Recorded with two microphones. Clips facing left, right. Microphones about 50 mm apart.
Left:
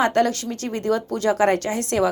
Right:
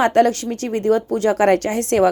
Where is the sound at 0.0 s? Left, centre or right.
Right.